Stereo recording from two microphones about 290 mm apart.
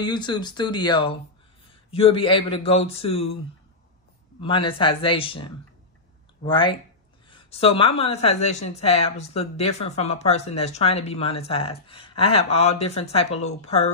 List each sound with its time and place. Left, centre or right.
0.0 s a woman's voice: centre
4.4 s a woman's voice: centre